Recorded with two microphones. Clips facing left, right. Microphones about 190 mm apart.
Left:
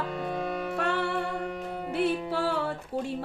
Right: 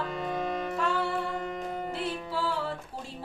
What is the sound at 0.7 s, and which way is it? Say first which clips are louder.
Music: left 2 dB; 65° left (ahead or behind).